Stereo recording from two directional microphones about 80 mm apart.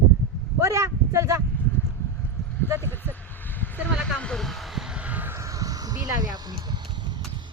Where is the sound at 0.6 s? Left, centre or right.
Right.